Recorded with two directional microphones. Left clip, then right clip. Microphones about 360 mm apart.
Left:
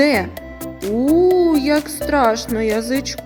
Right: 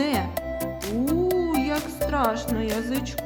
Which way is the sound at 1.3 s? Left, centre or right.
Centre.